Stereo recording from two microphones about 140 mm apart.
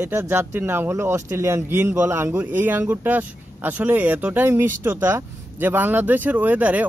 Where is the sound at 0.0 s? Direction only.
15° right (ahead or behind).